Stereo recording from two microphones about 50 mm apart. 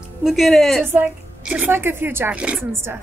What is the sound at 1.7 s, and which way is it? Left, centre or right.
Speech, right.